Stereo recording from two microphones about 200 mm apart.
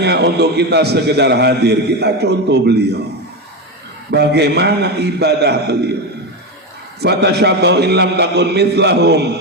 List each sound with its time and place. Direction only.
0.0 s a man's voice: 55° right (ahead or behind)
4.1 s a man's voice: 55° right (ahead or behind)
7.0 s a man's voice: 55° right (ahead or behind)